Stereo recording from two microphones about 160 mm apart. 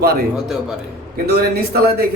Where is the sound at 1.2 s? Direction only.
80° right.